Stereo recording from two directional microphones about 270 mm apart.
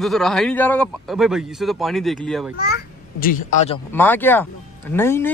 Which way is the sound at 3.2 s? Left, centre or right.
Left.